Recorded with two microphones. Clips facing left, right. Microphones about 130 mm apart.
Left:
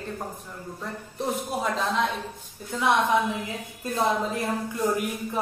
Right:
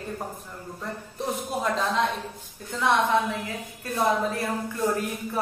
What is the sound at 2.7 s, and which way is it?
A woman's voice, 15° left (ahead or behind).